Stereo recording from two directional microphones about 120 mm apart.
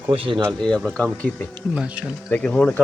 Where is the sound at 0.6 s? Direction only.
5° left (ahead or behind).